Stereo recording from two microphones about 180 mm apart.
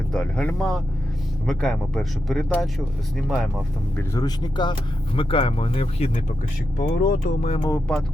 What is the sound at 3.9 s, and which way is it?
Speech, 20° left (ahead or behind).